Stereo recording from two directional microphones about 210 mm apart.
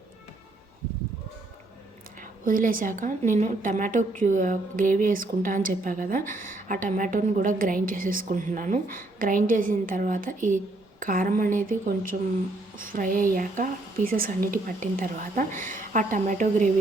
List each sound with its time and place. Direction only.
2.4 s a woman's voice: 40° right (ahead or behind)